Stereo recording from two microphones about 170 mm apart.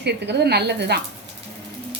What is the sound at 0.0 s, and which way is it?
A woman's voice, 75° right (ahead or behind).